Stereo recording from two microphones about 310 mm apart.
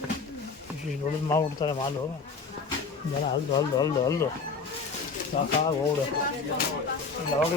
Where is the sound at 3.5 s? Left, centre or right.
Centre.